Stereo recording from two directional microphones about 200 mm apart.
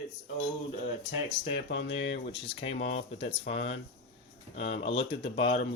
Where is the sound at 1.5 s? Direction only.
60° left (ahead or behind).